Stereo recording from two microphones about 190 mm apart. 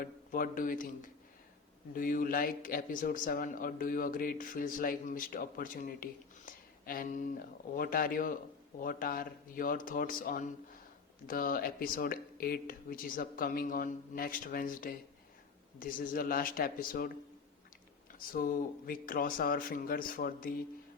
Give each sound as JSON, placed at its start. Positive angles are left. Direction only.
{"t": 0.0, "sound": "a man's voice", "side_deg": 50}
{"t": 2.0, "sound": "a man's voice", "side_deg": 50}
{"t": 18.2, "sound": "a man's voice", "side_deg": 50}